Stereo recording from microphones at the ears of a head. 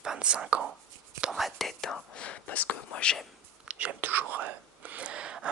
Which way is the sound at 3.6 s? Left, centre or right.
Right.